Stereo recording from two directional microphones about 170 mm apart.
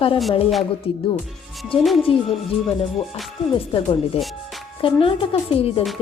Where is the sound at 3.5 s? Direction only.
30° left (ahead or behind).